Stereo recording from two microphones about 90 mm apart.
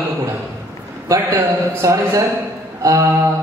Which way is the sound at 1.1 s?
40° right (ahead or behind).